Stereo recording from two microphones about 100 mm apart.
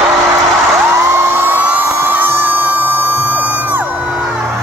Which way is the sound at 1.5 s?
15° right (ahead or behind).